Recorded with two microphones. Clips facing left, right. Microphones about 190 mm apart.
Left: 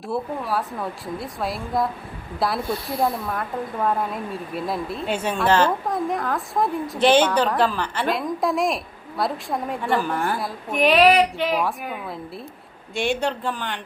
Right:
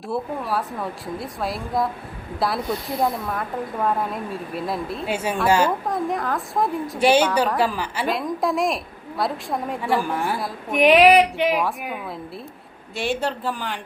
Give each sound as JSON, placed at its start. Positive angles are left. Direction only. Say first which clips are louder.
{"t": 0.1, "sound": "a woman's voice", "louder": "even", "side_deg": 0}
{"t": 10.7, "sound": "speech", "louder": "right 2 dB", "side_deg": -15}
{"t": 11.6, "sound": "a woman's voice", "louder": "even", "side_deg": 0}